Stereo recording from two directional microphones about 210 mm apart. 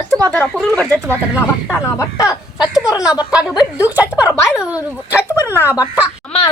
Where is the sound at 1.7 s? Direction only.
15° left (ahead or behind).